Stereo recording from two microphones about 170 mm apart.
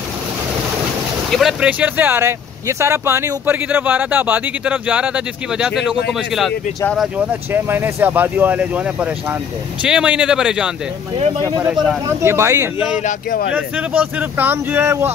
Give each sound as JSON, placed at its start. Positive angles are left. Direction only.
{"t": 1.3, "sound": "speech", "side_deg": -5}
{"t": 11.1, "sound": "speech", "side_deg": -40}
{"t": 11.6, "sound": "speech", "side_deg": -5}
{"t": 12.2, "sound": "speech", "side_deg": -15}
{"t": 13.0, "sound": "speech", "side_deg": 55}
{"t": 13.5, "sound": "speech", "side_deg": -10}